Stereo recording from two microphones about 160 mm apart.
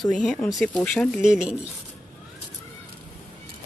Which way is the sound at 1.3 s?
5° right (ahead or behind).